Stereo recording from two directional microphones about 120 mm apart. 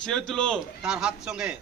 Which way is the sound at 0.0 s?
5° left (ahead or behind).